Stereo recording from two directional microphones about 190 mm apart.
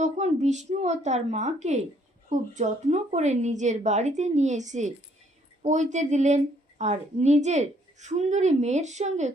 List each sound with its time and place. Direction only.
0.0 s a woman's voice: 40° right (ahead or behind)